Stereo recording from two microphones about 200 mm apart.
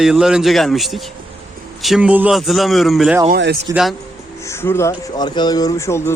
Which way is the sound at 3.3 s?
55° right (ahead or behind).